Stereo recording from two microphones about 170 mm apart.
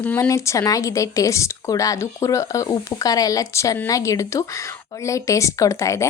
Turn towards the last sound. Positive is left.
turn(degrees=20)  # may be behind; listen again after turning